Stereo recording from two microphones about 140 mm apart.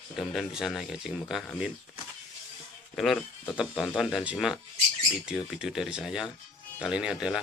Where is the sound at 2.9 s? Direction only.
5° left (ahead or behind).